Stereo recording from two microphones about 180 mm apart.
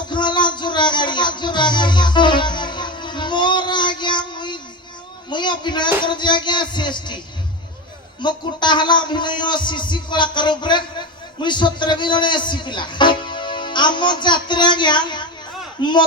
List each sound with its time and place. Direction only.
0.1 s music: 25° left (ahead or behind)
5.3 s a man's voice: 25° left (ahead or behind)
8.2 s a man's voice: 25° left (ahead or behind)